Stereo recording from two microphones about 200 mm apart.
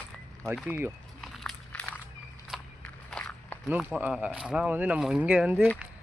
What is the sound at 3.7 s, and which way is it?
Speech, 5° right (ahead or behind).